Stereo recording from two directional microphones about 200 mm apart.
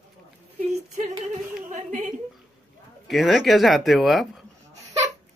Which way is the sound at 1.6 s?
40° right (ahead or behind).